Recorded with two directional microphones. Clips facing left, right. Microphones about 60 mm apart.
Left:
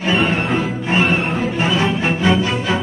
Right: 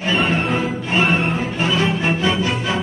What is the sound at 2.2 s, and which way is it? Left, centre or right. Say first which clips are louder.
Music: left 3 dB; left.